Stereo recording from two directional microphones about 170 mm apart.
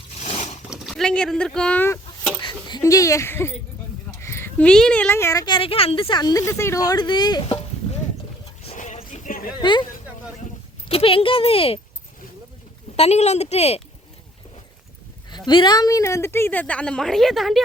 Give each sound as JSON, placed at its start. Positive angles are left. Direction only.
{"t": 0.2, "sound": "zipper", "side_deg": 40}
{"t": 0.7, "sound": "speech", "side_deg": 0}
{"t": 2.6, "sound": "a woman's voice", "side_deg": 25}
{"t": 8.6, "sound": "a sound", "side_deg": 45}
{"t": 9.6, "sound": "speech", "side_deg": 25}
{"t": 10.8, "sound": "speech", "side_deg": 35}
{"t": 13.0, "sound": "speech", "side_deg": 40}
{"t": 15.3, "sound": "a woman's voice", "side_deg": 25}